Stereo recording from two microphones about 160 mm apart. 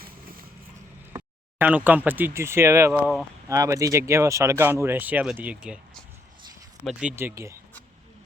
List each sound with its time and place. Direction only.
0.0 s vehicle: 65° right (ahead or behind)
1.1 s speech: 10° right (ahead or behind)
7.2 s speech: 15° right (ahead or behind)